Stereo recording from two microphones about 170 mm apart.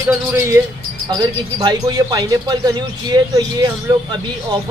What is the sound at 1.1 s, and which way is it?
Speech, 25° right (ahead or behind).